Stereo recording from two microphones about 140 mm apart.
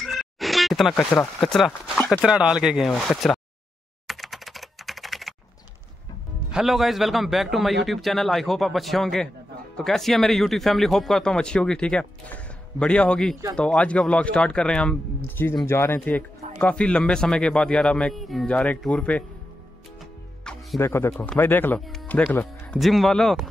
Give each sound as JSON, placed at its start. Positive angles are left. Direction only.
{"t": 0.0, "sound": "a sound", "side_deg": 0}
{"t": 2.2, "sound": "speech", "side_deg": -5}
{"t": 4.1, "sound": "computer keyboard", "side_deg": 0}
{"t": 6.5, "sound": "speech", "side_deg": 0}
{"t": 20.5, "sound": "music", "side_deg": 5}
{"t": 20.8, "sound": "speech", "side_deg": 15}
{"t": 22.8, "sound": "speech", "side_deg": 0}